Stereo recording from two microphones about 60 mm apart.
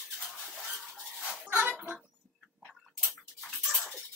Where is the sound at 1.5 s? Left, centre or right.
Right.